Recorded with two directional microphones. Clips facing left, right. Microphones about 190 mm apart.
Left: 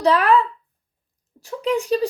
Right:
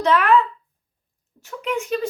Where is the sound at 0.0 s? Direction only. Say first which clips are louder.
Left 1 dB; 35° left (ahead or behind).